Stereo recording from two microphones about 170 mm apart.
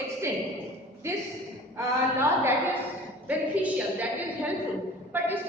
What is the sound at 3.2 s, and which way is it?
Speech, 10° right (ahead or behind).